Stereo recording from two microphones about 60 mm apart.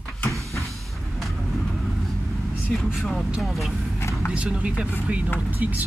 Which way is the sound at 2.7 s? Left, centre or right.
Centre.